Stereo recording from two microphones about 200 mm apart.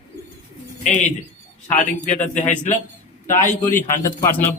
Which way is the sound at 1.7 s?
40° left (ahead or behind).